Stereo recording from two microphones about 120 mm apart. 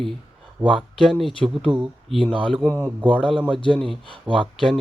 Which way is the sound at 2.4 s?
Centre (ahead or behind).